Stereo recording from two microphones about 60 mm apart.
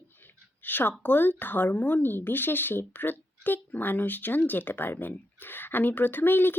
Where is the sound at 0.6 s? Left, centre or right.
Left.